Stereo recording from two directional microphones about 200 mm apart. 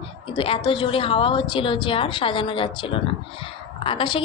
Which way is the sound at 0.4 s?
25° left (ahead or behind).